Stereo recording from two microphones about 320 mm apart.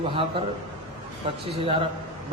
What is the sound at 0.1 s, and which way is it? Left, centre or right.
Speech, centre.